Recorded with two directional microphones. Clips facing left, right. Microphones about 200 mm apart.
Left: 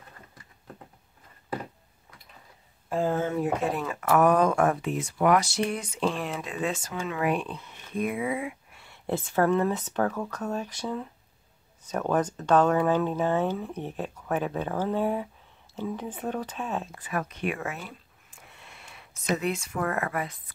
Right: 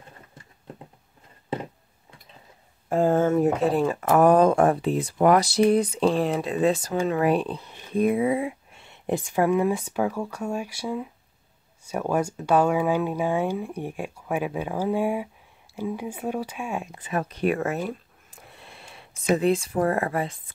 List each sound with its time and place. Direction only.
2.9 s speech: 50° right (ahead or behind); by 20.5 s 30° right (ahead or behind)